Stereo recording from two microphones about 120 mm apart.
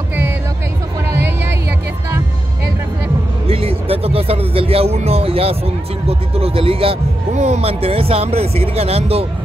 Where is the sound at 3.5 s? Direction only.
55° right (ahead or behind).